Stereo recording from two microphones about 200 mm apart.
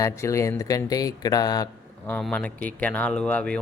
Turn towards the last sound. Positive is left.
turn(degrees=5)  # may be behind; listen again after turning